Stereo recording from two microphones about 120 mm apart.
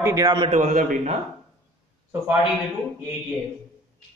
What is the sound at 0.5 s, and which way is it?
Speech, 90° right.